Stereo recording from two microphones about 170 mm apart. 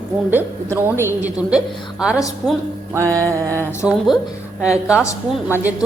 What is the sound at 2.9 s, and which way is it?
Speech, 20° right (ahead or behind).